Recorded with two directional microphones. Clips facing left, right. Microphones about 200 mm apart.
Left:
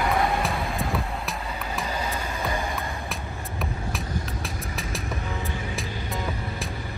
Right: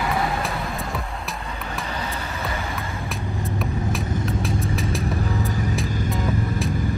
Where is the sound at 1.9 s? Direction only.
10° left (ahead or behind).